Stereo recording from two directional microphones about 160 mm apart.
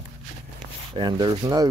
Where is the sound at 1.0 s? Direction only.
30° right (ahead or behind).